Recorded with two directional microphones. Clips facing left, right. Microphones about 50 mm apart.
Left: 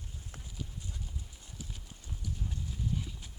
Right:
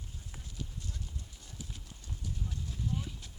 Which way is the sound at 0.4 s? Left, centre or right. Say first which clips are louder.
Right 1 dB; centre.